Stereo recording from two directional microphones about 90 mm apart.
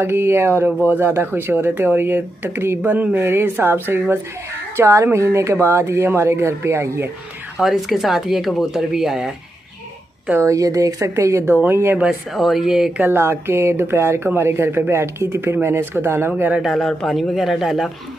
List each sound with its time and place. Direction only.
0.0 s speech: 25° right (ahead or behind)
7.5 s speech: 5° right (ahead or behind)
10.3 s speech: 35° right (ahead or behind)
12.4 s speech: 5° right (ahead or behind)
13.0 s speech: 25° right (ahead or behind)
16.6 s speech: 5° left (ahead or behind)